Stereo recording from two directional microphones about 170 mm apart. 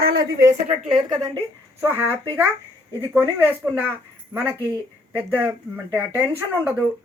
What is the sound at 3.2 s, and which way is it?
Speech, 10° right (ahead or behind).